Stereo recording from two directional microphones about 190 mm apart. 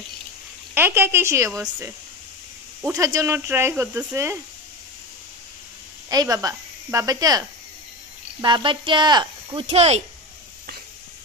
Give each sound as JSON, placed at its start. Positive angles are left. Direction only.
{"t": 0.7, "sound": "speech", "side_deg": -10}
{"t": 6.0, "sound": "speech", "side_deg": -20}